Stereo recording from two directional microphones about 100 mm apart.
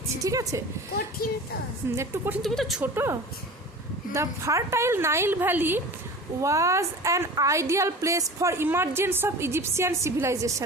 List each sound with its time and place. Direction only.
0.2 s a woman's voice: 35° right (ahead or behind)
2.0 s a woman's voice: 20° right (ahead or behind)
2.4 s speech: centre (ahead or behind)
2.8 s a woman's voice: 25° right (ahead or behind)
6.4 s a woman's voice: 30° right (ahead or behind)